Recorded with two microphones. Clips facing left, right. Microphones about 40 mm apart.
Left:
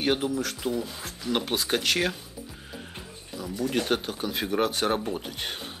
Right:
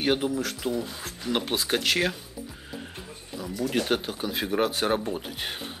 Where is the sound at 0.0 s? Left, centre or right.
Centre.